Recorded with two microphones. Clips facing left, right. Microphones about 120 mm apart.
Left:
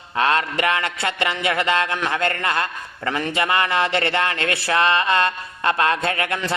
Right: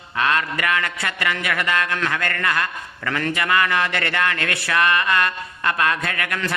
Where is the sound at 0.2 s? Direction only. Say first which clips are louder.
Left 2 dB; 25° left (ahead or behind).